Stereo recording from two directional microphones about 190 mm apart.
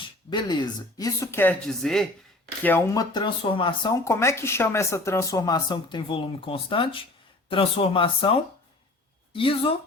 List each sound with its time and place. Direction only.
0.3 s speech: 25° left (ahead or behind); by 2.0 s centre (ahead or behind)
2.6 s speech: 15° left (ahead or behind)